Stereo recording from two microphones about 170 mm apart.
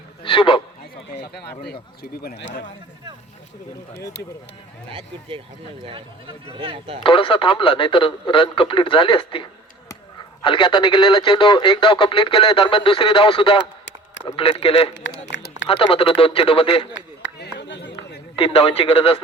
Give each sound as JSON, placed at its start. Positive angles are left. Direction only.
{"t": 0.2, "sound": "a sound", "side_deg": 30}
{"t": 1.1, "sound": "speech", "side_deg": 70}
{"t": 4.9, "sound": "speech", "side_deg": -30}
{"t": 7.0, "sound": "speech", "side_deg": 30}
{"t": 14.9, "sound": "a sound", "side_deg": 90}
{"t": 15.7, "sound": "speech", "side_deg": 30}
{"t": 16.9, "sound": "chop", "side_deg": 85}
{"t": 18.3, "sound": "speech", "side_deg": 35}